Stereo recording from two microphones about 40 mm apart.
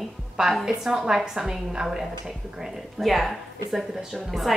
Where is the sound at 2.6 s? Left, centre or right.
Centre.